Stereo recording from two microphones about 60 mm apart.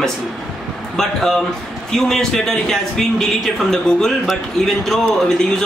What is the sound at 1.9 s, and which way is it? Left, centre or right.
A man's voice, centre.